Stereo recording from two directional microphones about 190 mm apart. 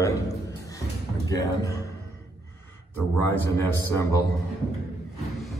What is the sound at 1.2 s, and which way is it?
Speech, 15° left (ahead or behind).